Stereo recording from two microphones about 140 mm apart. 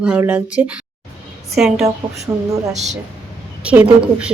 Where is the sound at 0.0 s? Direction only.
10° right (ahead or behind).